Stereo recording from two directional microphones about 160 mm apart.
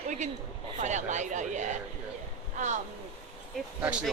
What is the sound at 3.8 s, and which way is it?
Speech, 5° right (ahead or behind).